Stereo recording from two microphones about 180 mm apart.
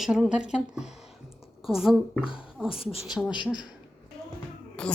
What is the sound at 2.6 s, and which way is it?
Speech, 30° left (ahead or behind).